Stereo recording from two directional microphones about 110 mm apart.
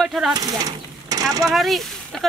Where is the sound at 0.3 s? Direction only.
35° right (ahead or behind).